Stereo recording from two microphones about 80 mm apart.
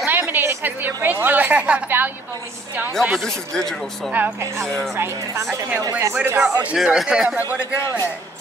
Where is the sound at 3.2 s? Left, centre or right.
Centre.